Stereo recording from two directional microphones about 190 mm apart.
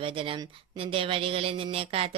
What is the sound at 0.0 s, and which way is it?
A woman's voice, 25° right (ahead or behind).